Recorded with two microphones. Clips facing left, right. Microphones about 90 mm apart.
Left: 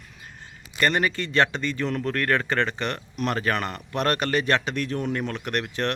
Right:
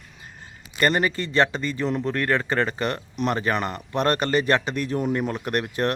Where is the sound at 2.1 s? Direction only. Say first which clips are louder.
Left 1 dB; 10° right (ahead or behind).